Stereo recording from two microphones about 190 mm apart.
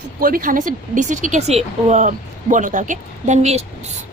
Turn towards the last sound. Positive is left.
turn(degrees=-35)  # may be behind; listen again after turning